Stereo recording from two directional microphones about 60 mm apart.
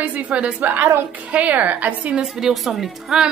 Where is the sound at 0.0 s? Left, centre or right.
Right.